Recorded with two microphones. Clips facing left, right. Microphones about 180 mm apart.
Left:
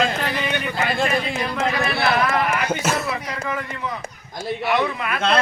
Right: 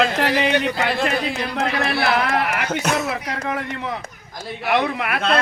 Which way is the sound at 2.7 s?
5° left (ahead or behind).